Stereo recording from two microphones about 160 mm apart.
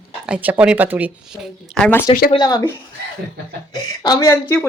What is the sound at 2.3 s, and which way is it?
Speech, 25° left (ahead or behind).